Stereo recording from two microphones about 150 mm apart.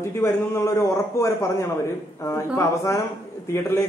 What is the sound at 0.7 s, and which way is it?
A man's voice, 20° left (ahead or behind).